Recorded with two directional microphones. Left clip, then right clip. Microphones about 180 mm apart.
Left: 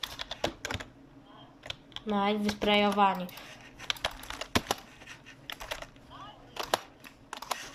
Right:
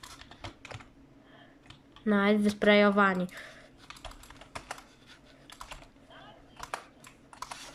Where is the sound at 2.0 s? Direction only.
55° right (ahead or behind).